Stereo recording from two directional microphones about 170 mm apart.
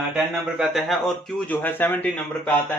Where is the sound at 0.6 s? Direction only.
Centre (ahead or behind).